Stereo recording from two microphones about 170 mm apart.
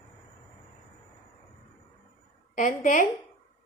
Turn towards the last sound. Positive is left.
turn(degrees=50)  # may be behind; listen again after turning